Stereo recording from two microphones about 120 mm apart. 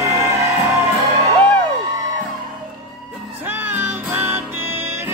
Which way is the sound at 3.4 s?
15° right (ahead or behind).